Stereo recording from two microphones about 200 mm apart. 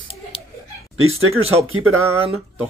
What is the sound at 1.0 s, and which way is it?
Speech, 90° right.